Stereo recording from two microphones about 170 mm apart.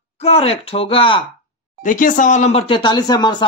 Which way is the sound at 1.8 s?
50° left (ahead or behind).